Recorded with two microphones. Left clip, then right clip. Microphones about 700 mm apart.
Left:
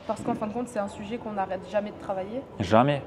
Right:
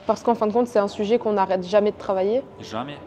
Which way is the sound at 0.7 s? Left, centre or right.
Right.